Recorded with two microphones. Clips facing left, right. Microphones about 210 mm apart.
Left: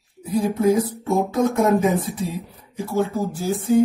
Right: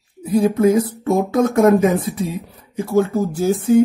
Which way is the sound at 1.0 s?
75° right (ahead or behind).